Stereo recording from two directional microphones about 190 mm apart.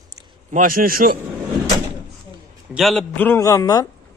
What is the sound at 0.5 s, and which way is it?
Speech, 50° right (ahead or behind).